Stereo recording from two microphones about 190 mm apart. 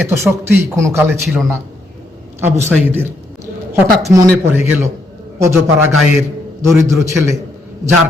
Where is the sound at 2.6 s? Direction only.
10° right (ahead or behind).